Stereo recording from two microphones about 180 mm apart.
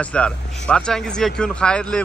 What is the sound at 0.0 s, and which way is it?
A man's voice, 5° left (ahead or behind).